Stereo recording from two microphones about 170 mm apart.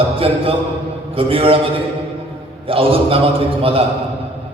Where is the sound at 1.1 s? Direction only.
35° right (ahead or behind).